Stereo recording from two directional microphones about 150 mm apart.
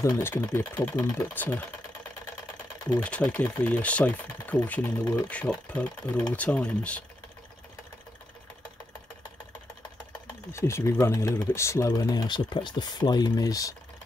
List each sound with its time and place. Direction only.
0.0 s speech: 15° left (ahead or behind)
3.0 s speech: 10° left (ahead or behind)
10.2 s speech: 20° left (ahead or behind)